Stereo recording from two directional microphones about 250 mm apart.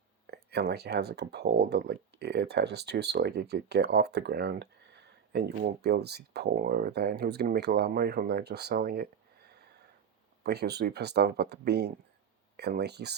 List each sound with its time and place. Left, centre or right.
0.3 s speech: right
10.4 s speech: right